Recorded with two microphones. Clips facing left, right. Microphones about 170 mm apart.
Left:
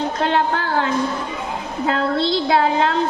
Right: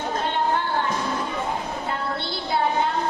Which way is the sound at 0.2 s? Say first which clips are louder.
Left 4 dB; 90° left.